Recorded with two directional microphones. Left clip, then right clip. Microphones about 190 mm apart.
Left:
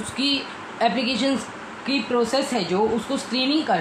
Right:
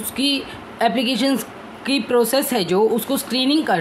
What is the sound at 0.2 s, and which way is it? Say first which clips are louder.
A woman's voice: right 3 dB; 40° right (ahead or behind).